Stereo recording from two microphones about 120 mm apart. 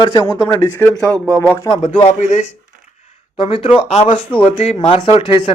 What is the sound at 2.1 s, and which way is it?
Speech, 80° left.